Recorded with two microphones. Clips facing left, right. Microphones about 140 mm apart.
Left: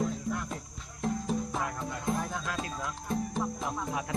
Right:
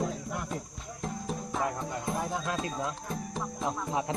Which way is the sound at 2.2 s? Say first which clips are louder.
Right 3 dB; 25° right (ahead or behind).